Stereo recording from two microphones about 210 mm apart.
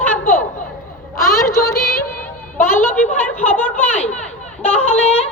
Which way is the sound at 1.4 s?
15° left (ahead or behind).